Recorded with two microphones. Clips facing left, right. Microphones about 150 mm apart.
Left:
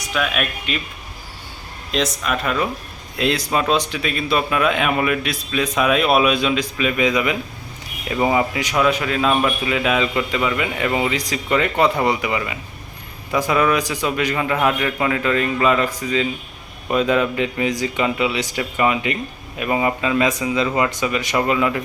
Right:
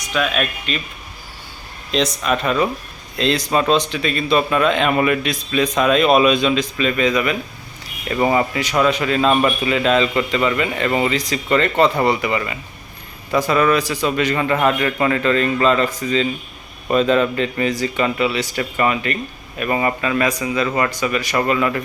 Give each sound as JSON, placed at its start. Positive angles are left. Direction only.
{"t": 0.1, "sound": "a man's voice", "side_deg": 5}
{"t": 1.9, "sound": "a man's voice", "side_deg": 5}